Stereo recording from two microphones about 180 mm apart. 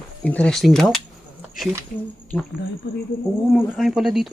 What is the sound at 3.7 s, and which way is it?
Speech, centre (ahead or behind).